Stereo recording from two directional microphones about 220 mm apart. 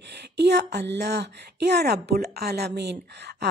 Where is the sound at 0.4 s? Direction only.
50° right (ahead or behind).